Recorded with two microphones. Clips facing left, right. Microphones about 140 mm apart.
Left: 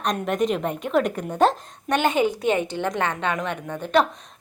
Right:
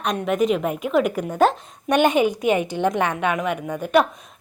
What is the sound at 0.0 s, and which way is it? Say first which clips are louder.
A woman's voice: right 2 dB; 5° right (ahead or behind).